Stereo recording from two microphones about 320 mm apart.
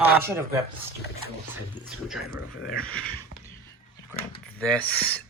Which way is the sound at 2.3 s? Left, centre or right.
Left.